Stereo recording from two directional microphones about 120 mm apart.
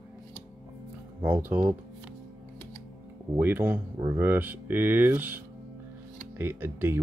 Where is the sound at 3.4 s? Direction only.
15° right (ahead or behind).